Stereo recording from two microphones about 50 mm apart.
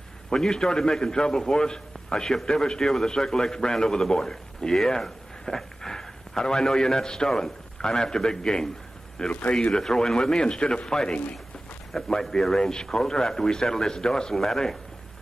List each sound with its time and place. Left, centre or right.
0.3 s a man's voice: centre